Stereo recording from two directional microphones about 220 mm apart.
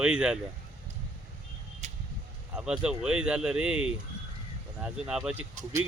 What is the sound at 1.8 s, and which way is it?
Vehicle, 30° right (ahead or behind).